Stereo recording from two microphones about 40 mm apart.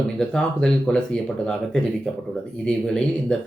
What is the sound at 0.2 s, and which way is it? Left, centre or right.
Speech, left.